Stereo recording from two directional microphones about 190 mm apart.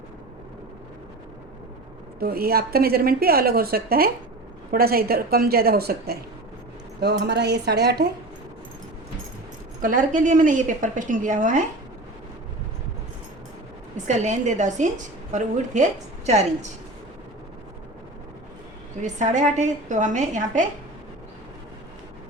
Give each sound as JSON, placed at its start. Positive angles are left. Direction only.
{"t": 2.1, "sound": "a woman's voice", "side_deg": -55}
{"t": 9.8, "sound": "a woman's voice", "side_deg": -45}
{"t": 13.9, "sound": "a woman's voice", "side_deg": -40}
{"t": 19.0, "sound": "a woman's voice", "side_deg": -40}